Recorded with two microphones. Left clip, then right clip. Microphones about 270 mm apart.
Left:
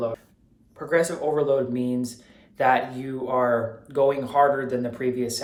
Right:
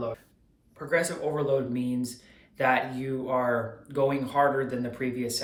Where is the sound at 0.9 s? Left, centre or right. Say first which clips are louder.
Left 5 dB; centre.